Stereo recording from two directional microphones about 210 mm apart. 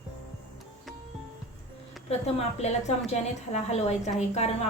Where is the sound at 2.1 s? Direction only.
30° left (ahead or behind).